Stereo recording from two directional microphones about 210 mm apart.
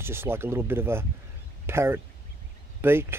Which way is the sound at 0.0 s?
10° right (ahead or behind).